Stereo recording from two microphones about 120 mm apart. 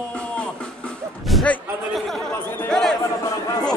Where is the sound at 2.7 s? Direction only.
5° left (ahead or behind).